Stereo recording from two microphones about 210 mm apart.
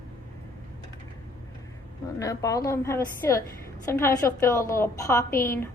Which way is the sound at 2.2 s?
15° left (ahead or behind).